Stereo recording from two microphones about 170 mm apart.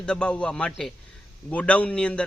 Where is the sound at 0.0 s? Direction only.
5° left (ahead or behind).